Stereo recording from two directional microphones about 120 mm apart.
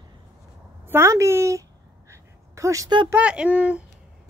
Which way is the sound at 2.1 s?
25° right (ahead or behind).